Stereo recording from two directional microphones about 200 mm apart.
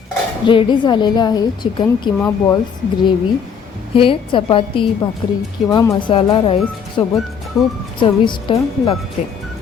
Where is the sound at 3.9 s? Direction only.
25° left (ahead or behind).